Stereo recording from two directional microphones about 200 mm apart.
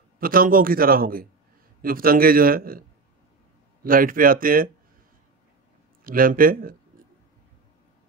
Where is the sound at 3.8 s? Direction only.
45° right (ahead or behind).